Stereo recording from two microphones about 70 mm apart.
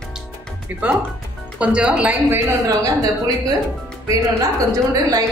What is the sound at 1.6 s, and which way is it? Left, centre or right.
Speech, centre.